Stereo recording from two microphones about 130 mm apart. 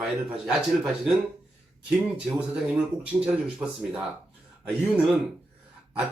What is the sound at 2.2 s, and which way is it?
Speech, 10° right (ahead or behind).